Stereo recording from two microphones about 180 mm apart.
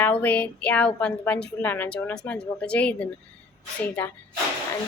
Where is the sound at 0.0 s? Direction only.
10° left (ahead or behind).